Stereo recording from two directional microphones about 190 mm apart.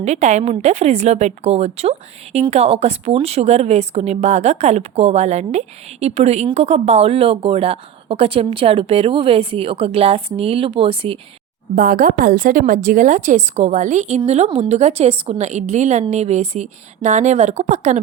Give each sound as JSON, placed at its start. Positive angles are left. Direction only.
{"t": 0.0, "sound": "speech", "side_deg": -35}
{"t": 11.7, "sound": "a woman's voice", "side_deg": -45}